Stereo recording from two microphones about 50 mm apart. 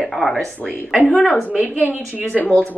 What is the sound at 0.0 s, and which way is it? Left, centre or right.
Speech, centre.